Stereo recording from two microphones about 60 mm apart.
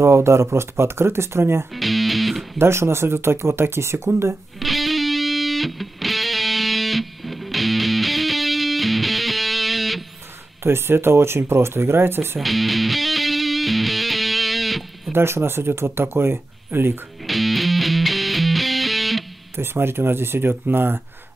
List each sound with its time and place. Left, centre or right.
0.0 s speech: right
1.8 s music: centre
2.6 s speech: right
4.6 s music: centre
10.6 s speech: right
12.4 s music: centre
15.1 s speech: right
17.3 s music: centre
19.5 s speech: right